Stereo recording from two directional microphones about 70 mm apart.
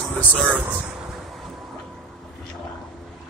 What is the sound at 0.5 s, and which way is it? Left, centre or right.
Speech, right.